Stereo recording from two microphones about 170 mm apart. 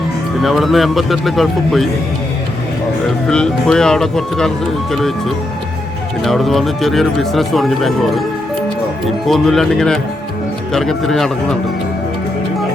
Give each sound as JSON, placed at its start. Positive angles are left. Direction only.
{"t": 0.4, "sound": "speech", "side_deg": 0}
{"t": 3.2, "sound": "speech", "side_deg": 5}
{"t": 6.2, "sound": "speech", "side_deg": 0}
{"t": 9.2, "sound": "speech", "side_deg": 0}